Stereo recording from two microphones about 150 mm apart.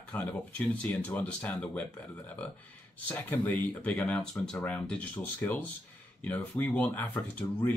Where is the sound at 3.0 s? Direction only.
10° left (ahead or behind).